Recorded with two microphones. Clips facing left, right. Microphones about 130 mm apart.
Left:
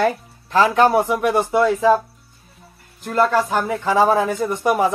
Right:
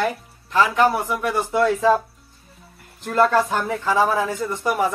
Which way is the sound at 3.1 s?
5° left (ahead or behind).